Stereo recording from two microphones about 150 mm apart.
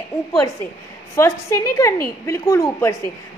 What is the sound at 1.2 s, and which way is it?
A woman's voice, 20° left (ahead or behind).